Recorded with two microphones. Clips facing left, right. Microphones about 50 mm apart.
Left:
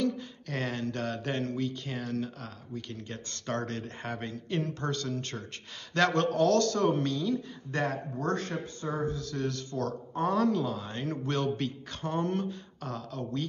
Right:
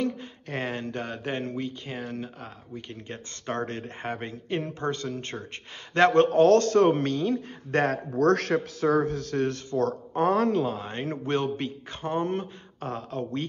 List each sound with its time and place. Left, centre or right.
0.0 s speech: right
8.2 s a man's voice: right
9.8 s speech: right